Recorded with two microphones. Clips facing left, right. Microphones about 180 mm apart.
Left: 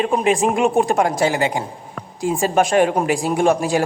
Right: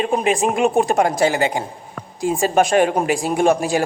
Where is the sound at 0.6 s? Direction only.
20° right (ahead or behind).